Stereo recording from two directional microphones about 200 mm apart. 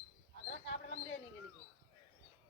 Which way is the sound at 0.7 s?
65° left (ahead or behind).